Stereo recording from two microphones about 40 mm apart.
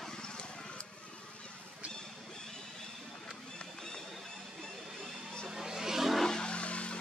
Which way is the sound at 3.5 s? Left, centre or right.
Centre.